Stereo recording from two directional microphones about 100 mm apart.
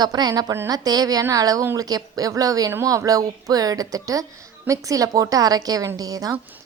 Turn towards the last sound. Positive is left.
turn(degrees=-40)  # may be behind; listen again after turning